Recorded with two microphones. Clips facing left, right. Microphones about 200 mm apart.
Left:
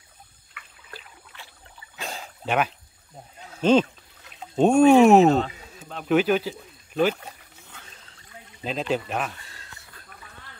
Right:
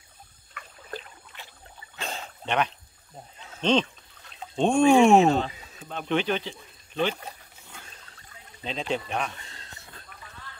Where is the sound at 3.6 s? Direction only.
5° left (ahead or behind).